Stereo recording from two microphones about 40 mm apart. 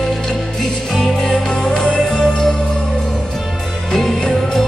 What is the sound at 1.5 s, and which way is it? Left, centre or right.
Music, left.